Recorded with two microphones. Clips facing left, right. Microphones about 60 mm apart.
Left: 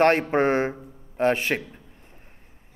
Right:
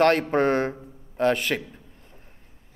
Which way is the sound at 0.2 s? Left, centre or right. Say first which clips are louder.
Even; left.